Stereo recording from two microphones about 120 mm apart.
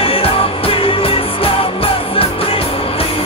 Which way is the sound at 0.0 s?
50° left (ahead or behind).